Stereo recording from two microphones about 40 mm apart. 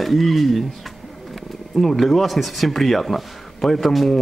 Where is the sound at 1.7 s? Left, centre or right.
Centre.